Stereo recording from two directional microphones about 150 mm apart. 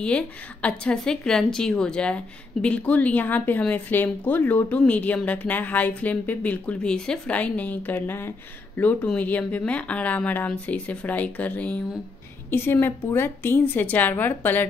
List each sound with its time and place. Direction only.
0.0 s a woman's voice: 10° left (ahead or behind)